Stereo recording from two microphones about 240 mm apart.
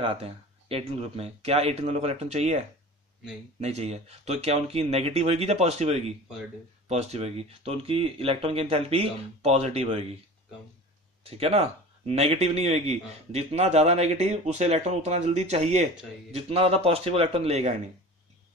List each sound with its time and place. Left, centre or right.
0.0 s speech: right
3.6 s speech: right
11.2 s speech: right